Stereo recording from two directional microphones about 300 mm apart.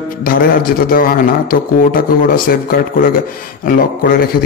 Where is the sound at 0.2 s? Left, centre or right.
Left.